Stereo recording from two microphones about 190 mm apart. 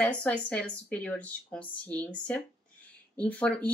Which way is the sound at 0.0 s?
5° left (ahead or behind).